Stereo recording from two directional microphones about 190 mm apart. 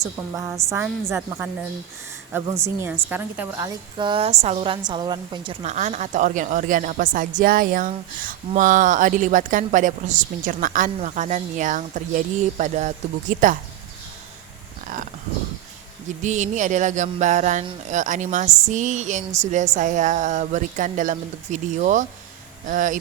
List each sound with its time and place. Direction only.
0.0 s a woman's voice: 15° right (ahead or behind)
2.3 s a woman's voice: 15° right (ahead or behind)
3.9 s a woman's voice: 25° right (ahead or behind)
5.6 s a woman's voice: 35° right (ahead or behind)
16.2 s a woman's voice: 40° right (ahead or behind)